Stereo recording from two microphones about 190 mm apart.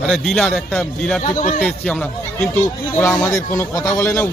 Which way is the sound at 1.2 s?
45° left (ahead or behind).